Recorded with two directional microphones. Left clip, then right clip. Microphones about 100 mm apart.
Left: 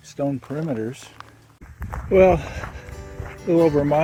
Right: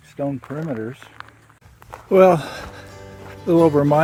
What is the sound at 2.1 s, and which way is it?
Speech, 55° right (ahead or behind).